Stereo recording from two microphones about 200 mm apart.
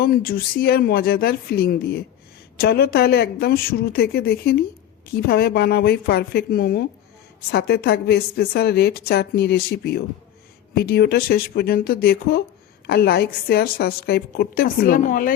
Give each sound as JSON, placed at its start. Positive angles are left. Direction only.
{"t": 0.0, "sound": "a woman's voice", "side_deg": 50}